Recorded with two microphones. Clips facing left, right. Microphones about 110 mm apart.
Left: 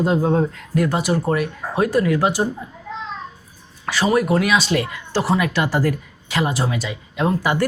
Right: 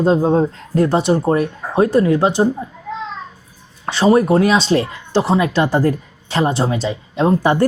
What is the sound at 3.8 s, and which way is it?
A woman's voice, 30° right (ahead or behind).